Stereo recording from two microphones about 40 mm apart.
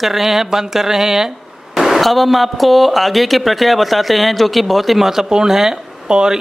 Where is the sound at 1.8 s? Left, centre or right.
Centre.